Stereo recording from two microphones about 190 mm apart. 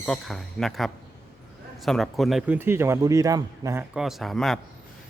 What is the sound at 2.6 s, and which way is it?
Speech, 15° right (ahead or behind).